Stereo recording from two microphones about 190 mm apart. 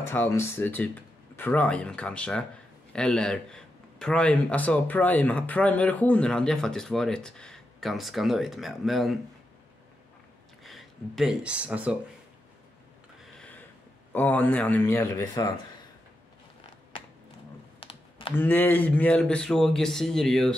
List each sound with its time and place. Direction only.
0.0 s a man's voice: 10° left (ahead or behind)
10.6 s speech: centre (ahead or behind)
14.1 s speech: 10° left (ahead or behind)
17.7 s typing: 30° left (ahead or behind)
18.3 s a man's voice: 10° left (ahead or behind)